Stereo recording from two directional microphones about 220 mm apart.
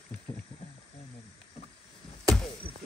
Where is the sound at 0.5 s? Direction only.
25° left (ahead or behind).